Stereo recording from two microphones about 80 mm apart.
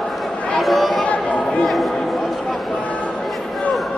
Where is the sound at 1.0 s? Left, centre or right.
Centre.